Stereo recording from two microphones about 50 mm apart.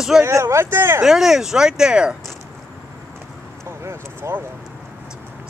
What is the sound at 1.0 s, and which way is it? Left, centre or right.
Speech, centre.